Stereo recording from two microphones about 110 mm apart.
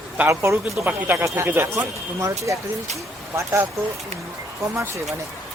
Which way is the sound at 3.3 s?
25° right (ahead or behind).